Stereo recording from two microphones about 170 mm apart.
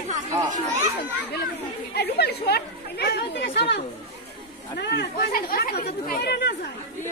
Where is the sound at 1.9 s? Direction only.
75° left (ahead or behind); by 3.8 s 90° left.